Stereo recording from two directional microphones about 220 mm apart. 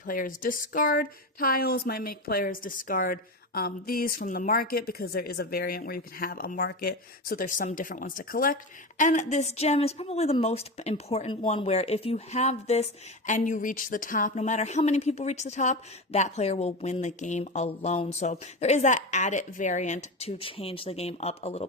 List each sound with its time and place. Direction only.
0.0 s a woman's voice: 40° left (ahead or behind)